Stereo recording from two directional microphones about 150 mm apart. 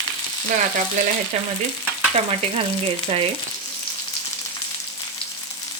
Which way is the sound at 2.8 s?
40° right (ahead or behind).